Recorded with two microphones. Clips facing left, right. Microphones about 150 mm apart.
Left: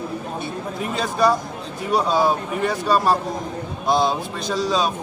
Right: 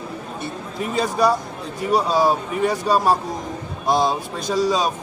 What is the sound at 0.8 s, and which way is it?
Speech, 5° right (ahead or behind).